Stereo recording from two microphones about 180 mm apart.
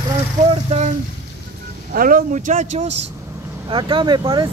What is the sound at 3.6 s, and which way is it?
Speech, 25° right (ahead or behind).